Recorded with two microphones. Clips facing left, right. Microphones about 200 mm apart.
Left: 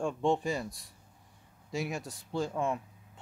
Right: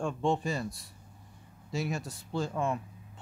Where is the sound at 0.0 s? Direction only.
15° left (ahead or behind).